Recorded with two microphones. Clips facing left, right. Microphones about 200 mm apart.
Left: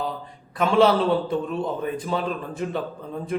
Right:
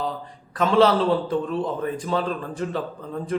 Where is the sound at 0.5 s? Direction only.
10° left (ahead or behind).